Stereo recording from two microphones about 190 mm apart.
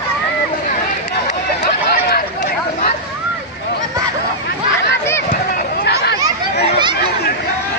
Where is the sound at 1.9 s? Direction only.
55° left (ahead or behind).